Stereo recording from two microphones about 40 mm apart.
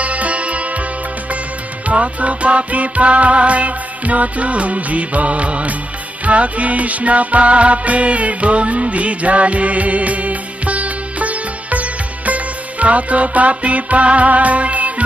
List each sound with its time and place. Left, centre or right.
0.0 s music: right
1.9 s music: right